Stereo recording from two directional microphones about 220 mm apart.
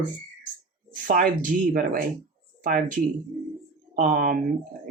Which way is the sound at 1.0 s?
40° right (ahead or behind).